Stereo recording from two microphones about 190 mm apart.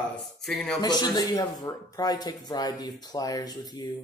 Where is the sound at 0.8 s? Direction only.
20° left (ahead or behind).